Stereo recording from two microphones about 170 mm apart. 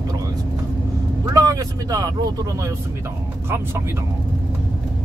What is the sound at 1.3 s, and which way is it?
Speech, 20° right (ahead or behind).